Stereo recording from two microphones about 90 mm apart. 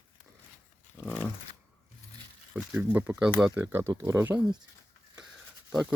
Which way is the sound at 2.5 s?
15° right (ahead or behind).